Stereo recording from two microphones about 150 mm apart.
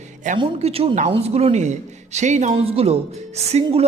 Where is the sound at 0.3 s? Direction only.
40° right (ahead or behind).